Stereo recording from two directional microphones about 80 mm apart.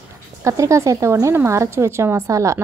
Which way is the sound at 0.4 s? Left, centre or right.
Right.